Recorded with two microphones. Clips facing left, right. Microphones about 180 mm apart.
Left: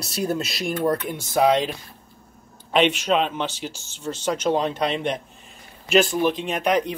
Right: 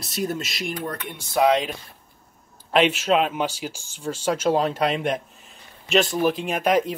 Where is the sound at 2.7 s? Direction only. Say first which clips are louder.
Even; 5° right (ahead or behind).